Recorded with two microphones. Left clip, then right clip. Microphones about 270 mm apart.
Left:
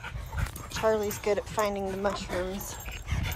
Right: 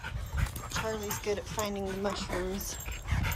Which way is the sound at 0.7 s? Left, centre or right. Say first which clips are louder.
Left 8 dB; centre.